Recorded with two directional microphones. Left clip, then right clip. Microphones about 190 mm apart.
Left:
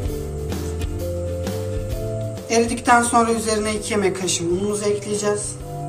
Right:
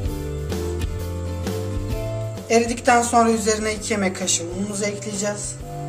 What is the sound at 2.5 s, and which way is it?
A woman's voice, 50° right (ahead or behind).